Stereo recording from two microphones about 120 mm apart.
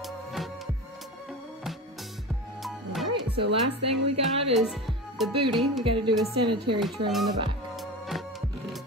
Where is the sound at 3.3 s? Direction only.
55° right (ahead or behind).